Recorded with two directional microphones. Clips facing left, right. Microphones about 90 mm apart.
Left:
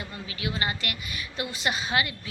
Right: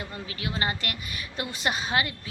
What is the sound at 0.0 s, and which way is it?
A woman's voice, 40° right (ahead or behind).